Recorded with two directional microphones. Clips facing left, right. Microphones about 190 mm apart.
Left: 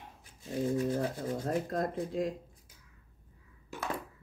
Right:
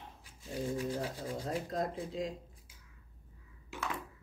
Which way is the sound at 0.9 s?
50° left (ahead or behind).